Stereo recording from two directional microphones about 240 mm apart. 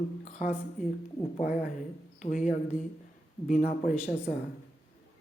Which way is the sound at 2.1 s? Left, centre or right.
Left.